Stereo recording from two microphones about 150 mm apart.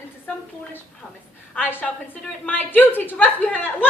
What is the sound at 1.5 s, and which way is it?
A woman's voice, 10° left (ahead or behind).